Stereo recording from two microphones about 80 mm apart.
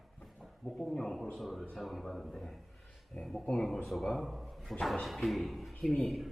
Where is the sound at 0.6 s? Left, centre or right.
Centre.